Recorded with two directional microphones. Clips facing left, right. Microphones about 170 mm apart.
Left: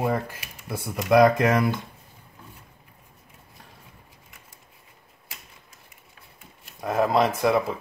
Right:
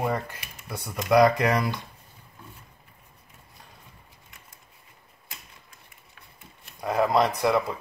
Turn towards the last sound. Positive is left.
turn(degrees=0)  # may be behind; listen again after turning